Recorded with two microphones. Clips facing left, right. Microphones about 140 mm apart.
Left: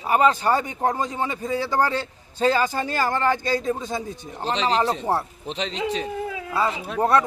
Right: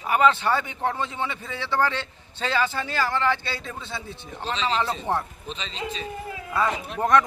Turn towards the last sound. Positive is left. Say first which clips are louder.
# left 1 dB
turn(degrees=35)  # may be behind; listen again after turning